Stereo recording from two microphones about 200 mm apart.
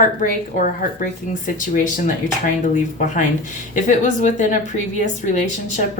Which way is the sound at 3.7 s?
40° left (ahead or behind).